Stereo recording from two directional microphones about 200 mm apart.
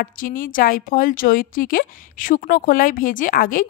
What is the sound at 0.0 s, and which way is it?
A woman's voice, 45° left (ahead or behind).